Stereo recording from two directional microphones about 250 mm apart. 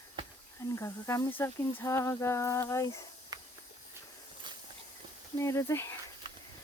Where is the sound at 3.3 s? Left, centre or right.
Centre.